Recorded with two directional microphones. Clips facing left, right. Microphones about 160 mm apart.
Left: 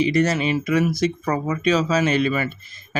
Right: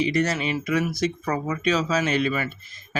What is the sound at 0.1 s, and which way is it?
Speech, 25° left (ahead or behind).